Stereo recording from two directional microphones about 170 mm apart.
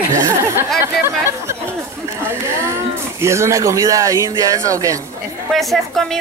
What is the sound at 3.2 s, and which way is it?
Speech, 15° right (ahead or behind).